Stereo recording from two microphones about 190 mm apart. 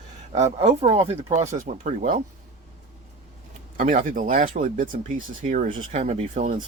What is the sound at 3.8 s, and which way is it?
Speech, 45° right (ahead or behind).